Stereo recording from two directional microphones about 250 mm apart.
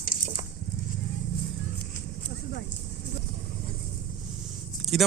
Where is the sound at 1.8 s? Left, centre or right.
Left.